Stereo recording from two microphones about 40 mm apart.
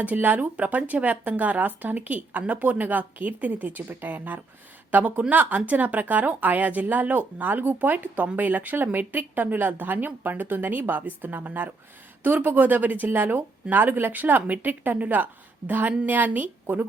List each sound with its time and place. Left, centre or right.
0.0 s a woman's voice: right
0.5 s a woman's voice: right
9.1 s a woman's voice: right